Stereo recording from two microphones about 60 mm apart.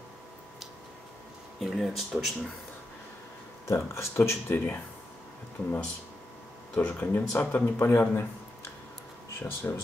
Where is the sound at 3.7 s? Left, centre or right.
Left.